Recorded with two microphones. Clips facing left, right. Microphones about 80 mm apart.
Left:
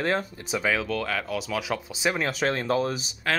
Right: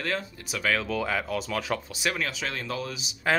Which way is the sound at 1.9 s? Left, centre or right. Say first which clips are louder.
Left 3 dB; left.